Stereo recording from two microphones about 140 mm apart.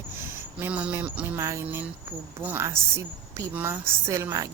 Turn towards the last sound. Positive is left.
turn(degrees=-20)  # may be behind; listen again after turning